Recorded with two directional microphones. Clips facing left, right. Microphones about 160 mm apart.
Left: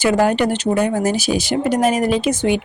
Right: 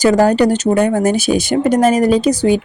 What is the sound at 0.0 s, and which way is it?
Speech, 40° right (ahead or behind).